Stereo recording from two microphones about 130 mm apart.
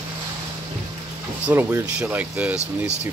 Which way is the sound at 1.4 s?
15° right (ahead or behind).